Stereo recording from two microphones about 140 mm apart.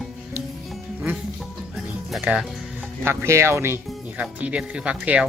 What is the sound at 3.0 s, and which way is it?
Speech, 15° right (ahead or behind).